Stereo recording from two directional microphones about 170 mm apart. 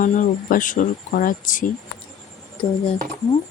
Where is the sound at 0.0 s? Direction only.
50° left (ahead or behind).